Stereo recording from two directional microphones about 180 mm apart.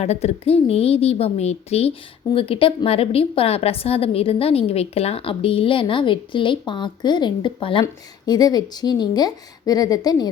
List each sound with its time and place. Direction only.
0.0 s a woman's voice: 35° left (ahead or behind)